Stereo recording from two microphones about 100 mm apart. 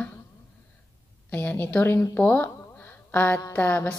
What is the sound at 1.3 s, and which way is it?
A woman's voice, 15° left (ahead or behind).